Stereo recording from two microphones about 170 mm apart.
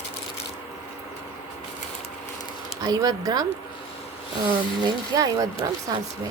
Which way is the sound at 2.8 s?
20° right (ahead or behind).